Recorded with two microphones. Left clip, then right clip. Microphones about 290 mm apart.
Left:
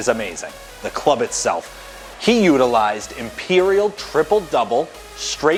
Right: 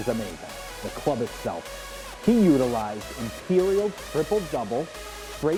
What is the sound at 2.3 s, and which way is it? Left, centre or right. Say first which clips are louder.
Speech: left 7 dB; centre.